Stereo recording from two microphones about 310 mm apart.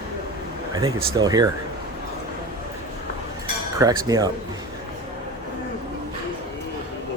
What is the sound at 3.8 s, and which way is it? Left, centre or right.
Speech, centre.